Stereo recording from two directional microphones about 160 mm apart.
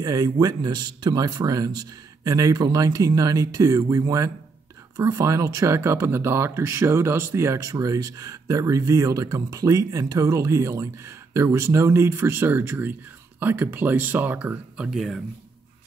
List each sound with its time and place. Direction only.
0.0 s speech: 25° right (ahead or behind); by 15.2 s centre (ahead or behind)